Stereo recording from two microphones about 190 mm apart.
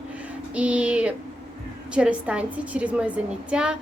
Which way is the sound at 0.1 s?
5° right (ahead or behind).